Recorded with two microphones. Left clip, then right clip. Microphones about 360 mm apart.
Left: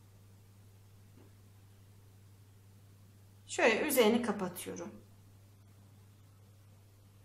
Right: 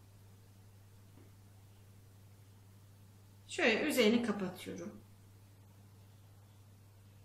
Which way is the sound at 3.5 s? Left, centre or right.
Centre.